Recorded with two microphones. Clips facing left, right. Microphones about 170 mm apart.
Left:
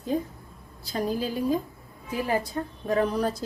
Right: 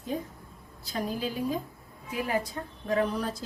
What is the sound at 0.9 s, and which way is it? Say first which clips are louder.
A woman's voice: left 4 dB; 35° left (ahead or behind).